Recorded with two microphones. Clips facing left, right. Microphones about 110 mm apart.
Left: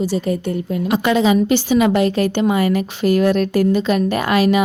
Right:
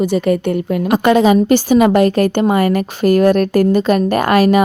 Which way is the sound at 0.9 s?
50° right (ahead or behind).